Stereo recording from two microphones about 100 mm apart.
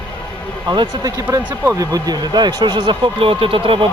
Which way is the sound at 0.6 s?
45° right (ahead or behind).